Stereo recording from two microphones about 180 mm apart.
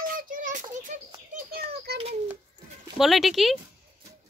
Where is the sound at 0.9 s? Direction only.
40° right (ahead or behind).